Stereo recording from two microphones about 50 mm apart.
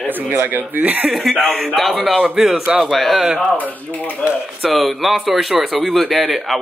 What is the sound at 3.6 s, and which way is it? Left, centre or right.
Speech, left.